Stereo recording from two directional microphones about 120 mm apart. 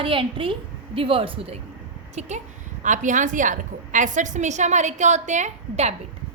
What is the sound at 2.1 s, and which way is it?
Speech, 75° right (ahead or behind).